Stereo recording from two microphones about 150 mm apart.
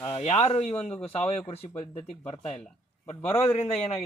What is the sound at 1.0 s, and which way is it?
A man's voice, 40° left (ahead or behind).